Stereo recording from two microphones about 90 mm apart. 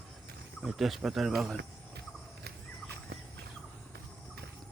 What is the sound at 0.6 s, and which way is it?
Speech, 5° right (ahead or behind).